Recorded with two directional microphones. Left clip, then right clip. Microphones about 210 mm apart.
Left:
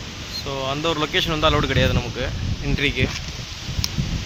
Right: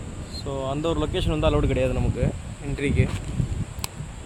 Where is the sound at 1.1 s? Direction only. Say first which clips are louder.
Left 7 dB; centre (ahead or behind).